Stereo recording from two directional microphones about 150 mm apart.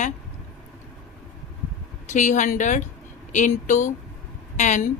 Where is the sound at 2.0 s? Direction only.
55° left (ahead or behind).